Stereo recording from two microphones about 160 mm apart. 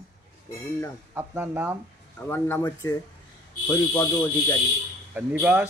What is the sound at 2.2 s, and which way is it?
Speech, 15° left (ahead or behind).